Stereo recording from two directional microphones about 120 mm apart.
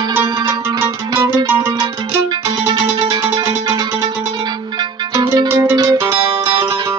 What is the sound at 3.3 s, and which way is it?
Music, 50° right (ahead or behind).